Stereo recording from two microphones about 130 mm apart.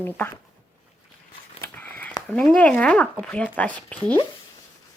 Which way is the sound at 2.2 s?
5° left (ahead or behind).